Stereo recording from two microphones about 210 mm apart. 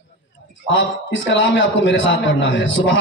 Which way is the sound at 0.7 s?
60° left (ahead or behind).